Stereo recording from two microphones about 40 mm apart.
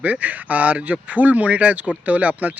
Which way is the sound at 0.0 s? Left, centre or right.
Right.